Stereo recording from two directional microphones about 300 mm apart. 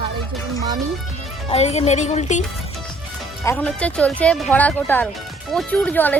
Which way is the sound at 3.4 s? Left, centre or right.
Centre.